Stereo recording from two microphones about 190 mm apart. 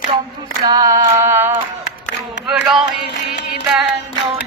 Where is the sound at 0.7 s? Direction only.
20° right (ahead or behind); by 2.8 s 5° right (ahead or behind).